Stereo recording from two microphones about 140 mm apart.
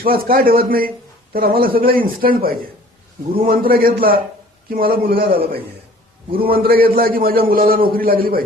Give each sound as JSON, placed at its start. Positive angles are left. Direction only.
{"t": 0.0, "sound": "a man's voice", "side_deg": -90}
{"t": 6.4, "sound": "a man's voice", "side_deg": -90}